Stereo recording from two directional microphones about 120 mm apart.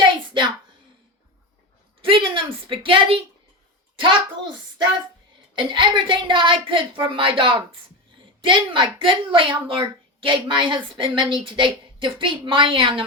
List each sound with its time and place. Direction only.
2.0 s a sound: 45° right (ahead or behind)
3.9 s a child's voice: 45° right (ahead or behind)
5.5 s a woman's voice: 40° right (ahead or behind)